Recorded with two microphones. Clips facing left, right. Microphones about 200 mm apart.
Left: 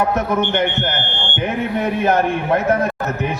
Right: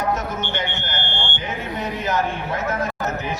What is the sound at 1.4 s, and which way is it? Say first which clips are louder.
A man's voice: left 11 dB; 60° left (ahead or behind).